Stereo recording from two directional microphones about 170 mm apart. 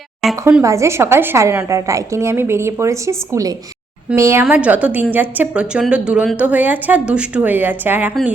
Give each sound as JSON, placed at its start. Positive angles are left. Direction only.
{"t": 0.4, "sound": "a woman's voice", "side_deg": -15}